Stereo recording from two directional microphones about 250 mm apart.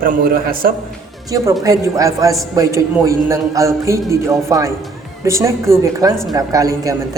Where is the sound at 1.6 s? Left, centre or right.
Centre.